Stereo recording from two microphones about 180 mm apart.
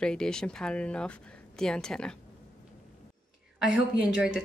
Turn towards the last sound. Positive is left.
turn(degrees=-5)  # may be behind; listen again after turning